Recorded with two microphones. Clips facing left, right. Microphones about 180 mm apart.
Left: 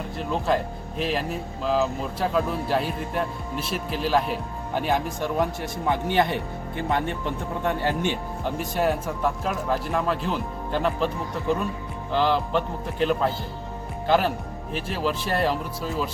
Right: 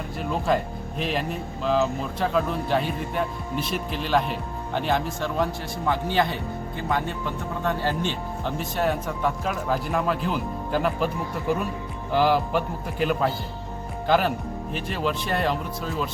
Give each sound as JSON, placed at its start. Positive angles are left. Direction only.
{"t": 0.2, "sound": "speech", "side_deg": 0}
{"t": 12.1, "sound": "a man's voice", "side_deg": -10}